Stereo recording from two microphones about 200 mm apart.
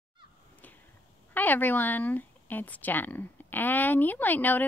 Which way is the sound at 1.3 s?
10° left (ahead or behind).